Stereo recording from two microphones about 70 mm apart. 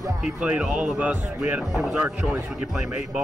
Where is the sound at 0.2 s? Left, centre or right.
Centre.